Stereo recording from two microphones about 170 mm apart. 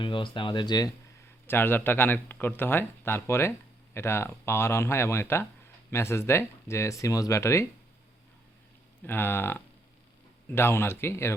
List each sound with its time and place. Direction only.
0.0 s speech: 30° left (ahead or behind)
1.5 s speech: 10° left (ahead or behind)
9.0 s speech: 10° left (ahead or behind)